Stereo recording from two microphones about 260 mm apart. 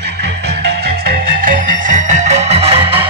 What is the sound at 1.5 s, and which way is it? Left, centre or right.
Music, right.